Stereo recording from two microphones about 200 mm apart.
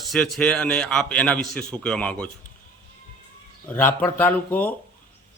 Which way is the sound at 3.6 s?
10° left (ahead or behind).